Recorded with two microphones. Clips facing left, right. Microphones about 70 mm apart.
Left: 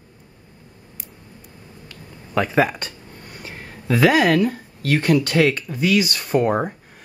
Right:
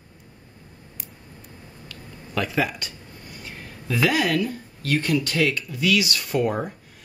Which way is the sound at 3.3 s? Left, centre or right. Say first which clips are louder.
Left 3 dB; left.